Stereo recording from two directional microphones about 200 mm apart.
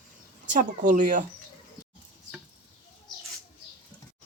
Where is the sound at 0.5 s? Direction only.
40° right (ahead or behind).